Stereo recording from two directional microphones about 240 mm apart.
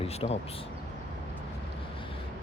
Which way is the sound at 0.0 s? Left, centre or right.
Left.